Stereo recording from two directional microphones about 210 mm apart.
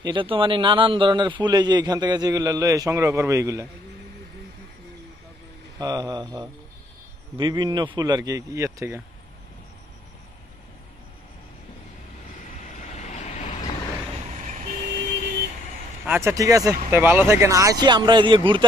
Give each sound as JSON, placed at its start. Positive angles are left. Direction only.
{"t": 0.0, "sound": "a man's voice", "side_deg": -25}
{"t": 5.8, "sound": "a man's voice", "side_deg": -20}
{"t": 12.6, "sound": "vehicle", "side_deg": 35}
{"t": 14.4, "sound": "vehicle", "side_deg": -35}
{"t": 16.1, "sound": "speech", "side_deg": -10}